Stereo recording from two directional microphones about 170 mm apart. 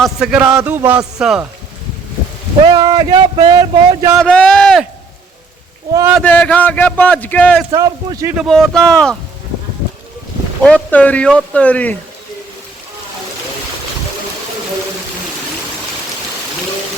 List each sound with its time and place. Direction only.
0.0 s a man's voice: 5° right (ahead or behind)
2.6 s speech: 25° right (ahead or behind)
4.1 s speech: 5° left (ahead or behind)
6.2 s a man's voice: 10° left (ahead or behind)
7.7 s speech: 20° right (ahead or behind)
8.4 s speech: centre (ahead or behind)
10.6 s a man's voice: 5° left (ahead or behind)